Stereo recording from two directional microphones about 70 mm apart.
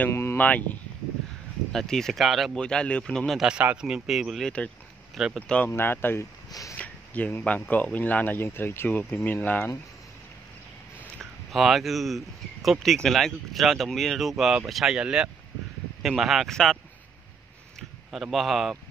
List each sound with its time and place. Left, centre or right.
0.1 s a sound: left
0.4 s speech: left
1.7 s speech: centre
2.5 s speech: centre
3.7 s speech: centre
5.7 s speech: left
6.8 s a sound: centre
7.4 s speech: left
11.5 s speech: centre
17.7 s speech: centre